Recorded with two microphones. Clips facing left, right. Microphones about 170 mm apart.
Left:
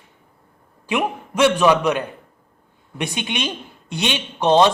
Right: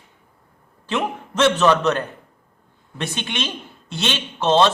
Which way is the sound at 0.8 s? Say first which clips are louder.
Left 2 dB; 10° left (ahead or behind).